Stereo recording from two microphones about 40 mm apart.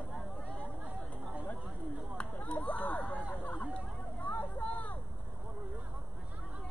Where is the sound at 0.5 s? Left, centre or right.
Right.